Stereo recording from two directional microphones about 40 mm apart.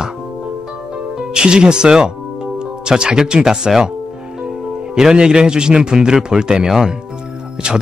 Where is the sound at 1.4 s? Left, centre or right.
Right.